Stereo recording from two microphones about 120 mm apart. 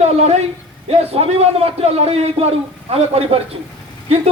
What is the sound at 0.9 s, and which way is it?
A man's voice, 55° right (ahead or behind).